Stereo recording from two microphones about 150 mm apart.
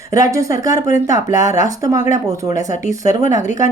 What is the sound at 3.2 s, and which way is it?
Speech, 55° left (ahead or behind).